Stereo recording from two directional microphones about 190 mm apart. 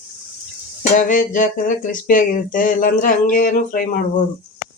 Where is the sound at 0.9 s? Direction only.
45° left (ahead or behind).